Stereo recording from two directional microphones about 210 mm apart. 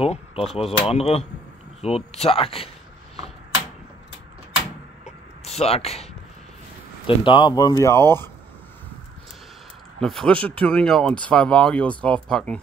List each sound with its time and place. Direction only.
0.0 s speech: 30° left (ahead or behind)
5.0 s a sound: 30° left (ahead or behind)
7.2 s speech: 20° left (ahead or behind)
9.9 s speech: centre (ahead or behind)